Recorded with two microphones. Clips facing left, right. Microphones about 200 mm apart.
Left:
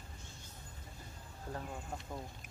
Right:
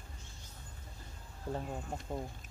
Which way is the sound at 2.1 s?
25° right (ahead or behind).